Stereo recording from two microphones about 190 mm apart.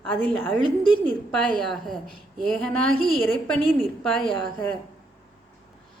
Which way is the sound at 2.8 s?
90° right.